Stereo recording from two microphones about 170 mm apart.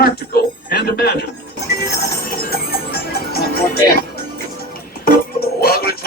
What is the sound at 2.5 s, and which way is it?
Music, 60° left (ahead or behind).